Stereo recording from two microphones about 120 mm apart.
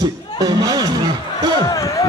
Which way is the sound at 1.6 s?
30° left (ahead or behind).